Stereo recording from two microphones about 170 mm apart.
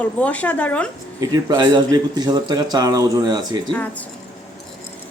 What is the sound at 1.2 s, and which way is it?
A man's voice, 25° right (ahead or behind).